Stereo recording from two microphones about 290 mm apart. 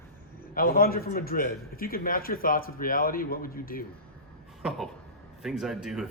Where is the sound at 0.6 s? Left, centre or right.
Left.